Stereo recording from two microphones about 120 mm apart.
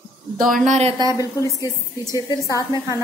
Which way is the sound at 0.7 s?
65° right (ahead or behind).